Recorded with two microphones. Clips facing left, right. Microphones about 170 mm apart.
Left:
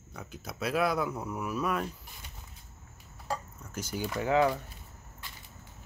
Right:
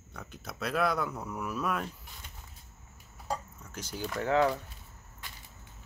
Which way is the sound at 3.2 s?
5° left (ahead or behind).